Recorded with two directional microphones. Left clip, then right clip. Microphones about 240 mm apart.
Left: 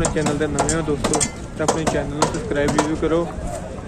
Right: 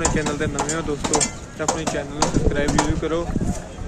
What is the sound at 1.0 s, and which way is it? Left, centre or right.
Speech, left.